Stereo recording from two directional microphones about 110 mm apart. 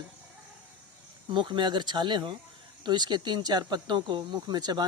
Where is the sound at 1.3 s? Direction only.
45° right (ahead or behind).